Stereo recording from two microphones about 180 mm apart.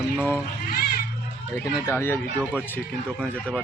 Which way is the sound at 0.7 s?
60° left (ahead or behind).